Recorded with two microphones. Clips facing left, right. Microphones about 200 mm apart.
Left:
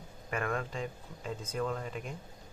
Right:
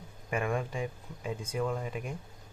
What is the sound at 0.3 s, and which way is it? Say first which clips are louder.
Speech: right 3 dB; 10° right (ahead or behind).